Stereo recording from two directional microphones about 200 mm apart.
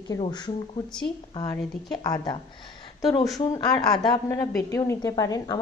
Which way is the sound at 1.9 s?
20° left (ahead or behind).